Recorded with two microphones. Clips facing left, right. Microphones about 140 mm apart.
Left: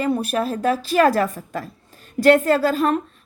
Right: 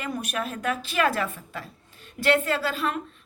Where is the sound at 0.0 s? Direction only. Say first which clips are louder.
Left 9 dB; 35° left (ahead or behind).